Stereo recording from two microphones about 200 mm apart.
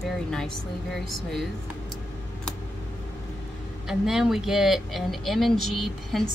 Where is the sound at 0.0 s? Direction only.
5° left (ahead or behind).